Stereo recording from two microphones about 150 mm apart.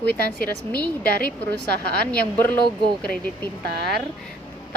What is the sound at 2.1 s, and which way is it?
Speech, 10° left (ahead or behind).